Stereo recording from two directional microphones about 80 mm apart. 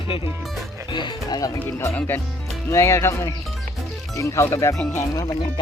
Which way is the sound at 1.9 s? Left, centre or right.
Left.